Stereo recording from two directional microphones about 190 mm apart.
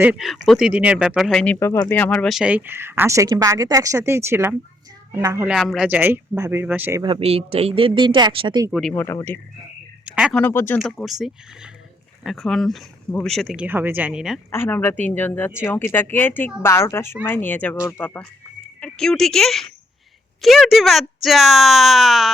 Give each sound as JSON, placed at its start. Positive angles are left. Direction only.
{"t": 0.0, "sound": "speech", "side_deg": -5}
{"t": 1.5, "sound": "speech", "side_deg": 15}
{"t": 5.5, "sound": "speech", "side_deg": 0}
{"t": 7.0, "sound": "speech", "side_deg": -30}
{"t": 8.7, "sound": "speech", "side_deg": 5}
{"t": 10.1, "sound": "speech", "side_deg": -5}
{"t": 10.3, "sound": "speech", "side_deg": 10}
{"t": 10.8, "sound": "speech", "side_deg": 0}
{"t": 14.5, "sound": "speech", "side_deg": 10}